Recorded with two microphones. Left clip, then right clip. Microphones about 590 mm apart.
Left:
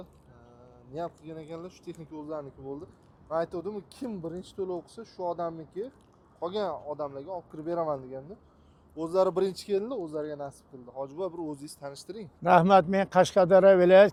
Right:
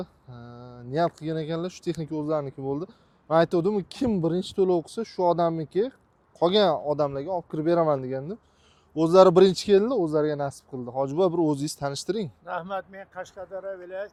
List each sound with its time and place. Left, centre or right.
0.5 s speech: right
12.5 s speech: left
13.1 s speech: left